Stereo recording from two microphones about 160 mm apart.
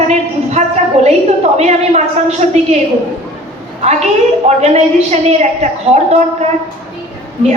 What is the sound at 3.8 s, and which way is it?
A woman's voice, 45° right (ahead or behind).